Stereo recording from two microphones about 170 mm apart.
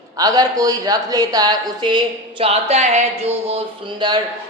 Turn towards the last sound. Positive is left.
turn(degrees=-30)  # may be behind; listen again after turning